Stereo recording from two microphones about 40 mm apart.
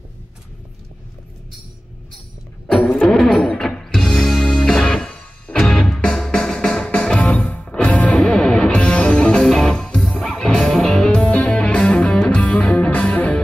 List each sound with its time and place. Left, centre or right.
3.1 s music: centre; by 7.6 s left
7.6 s music: left
11.2 s music: left
12.4 s music: left